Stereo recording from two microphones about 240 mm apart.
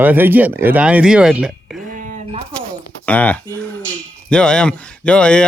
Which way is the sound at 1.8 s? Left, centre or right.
Right.